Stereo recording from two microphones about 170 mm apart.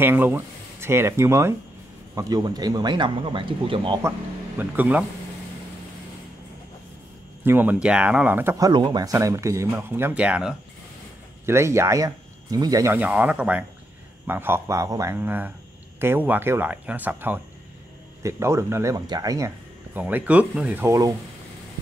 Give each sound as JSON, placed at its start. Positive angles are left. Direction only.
{"t": 0.0, "sound": "speech", "side_deg": -10}
{"t": 4.6, "sound": "speech", "side_deg": -10}
{"t": 7.4, "sound": "speech", "side_deg": -10}